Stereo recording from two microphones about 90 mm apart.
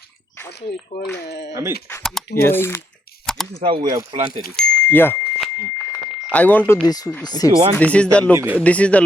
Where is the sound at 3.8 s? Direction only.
50° right (ahead or behind).